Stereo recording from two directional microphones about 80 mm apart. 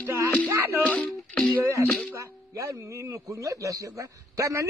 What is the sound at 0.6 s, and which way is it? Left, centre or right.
Music, right.